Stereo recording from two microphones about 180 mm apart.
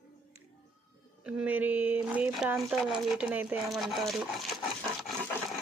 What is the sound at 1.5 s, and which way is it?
Speech, 10° right (ahead or behind).